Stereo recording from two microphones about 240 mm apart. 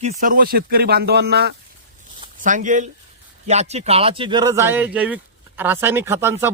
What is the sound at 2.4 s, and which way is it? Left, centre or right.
Speech, right.